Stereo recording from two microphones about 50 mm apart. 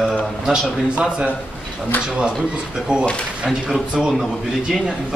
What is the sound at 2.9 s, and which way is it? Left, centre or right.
Speech, right.